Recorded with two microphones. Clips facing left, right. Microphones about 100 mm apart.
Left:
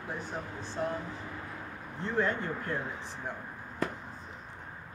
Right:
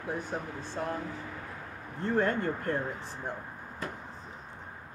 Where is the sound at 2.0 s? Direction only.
50° right (ahead or behind).